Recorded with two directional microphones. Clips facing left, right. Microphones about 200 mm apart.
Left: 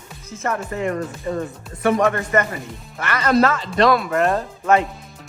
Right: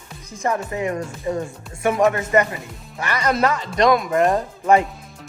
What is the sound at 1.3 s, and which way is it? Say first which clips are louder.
Speech: right 3 dB; 20° right (ahead or behind).